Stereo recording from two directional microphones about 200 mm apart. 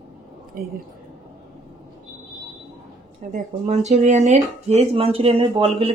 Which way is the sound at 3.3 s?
35° right (ahead or behind).